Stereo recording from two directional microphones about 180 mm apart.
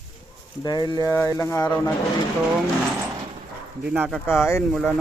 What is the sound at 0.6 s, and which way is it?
Speech, 20° left (ahead or behind).